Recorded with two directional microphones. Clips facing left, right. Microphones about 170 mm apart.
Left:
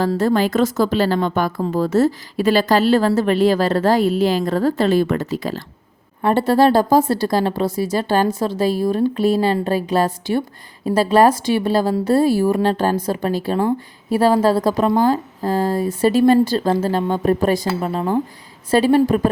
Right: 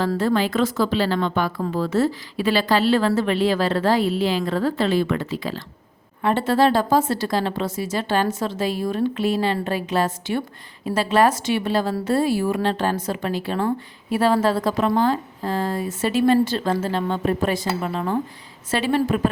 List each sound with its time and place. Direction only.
0.2 s a woman's voice: 45° left (ahead or behind)